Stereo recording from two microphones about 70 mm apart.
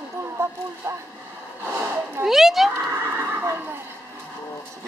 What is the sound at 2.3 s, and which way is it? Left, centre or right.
Speech, centre.